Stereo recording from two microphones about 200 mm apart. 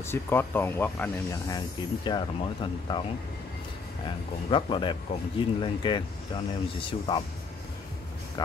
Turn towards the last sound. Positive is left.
turn(degrees=25)  # may be behind; listen again after turning